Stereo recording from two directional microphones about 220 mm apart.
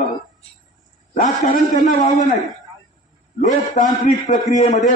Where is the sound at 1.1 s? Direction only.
35° left (ahead or behind).